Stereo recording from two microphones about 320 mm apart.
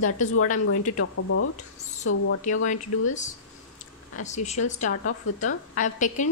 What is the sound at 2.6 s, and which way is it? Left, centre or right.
A woman's voice, left.